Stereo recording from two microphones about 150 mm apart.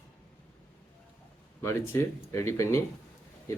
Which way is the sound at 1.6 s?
15° left (ahead or behind).